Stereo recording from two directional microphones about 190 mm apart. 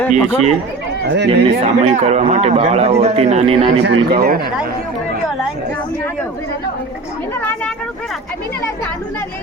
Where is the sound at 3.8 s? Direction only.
60° right (ahead or behind).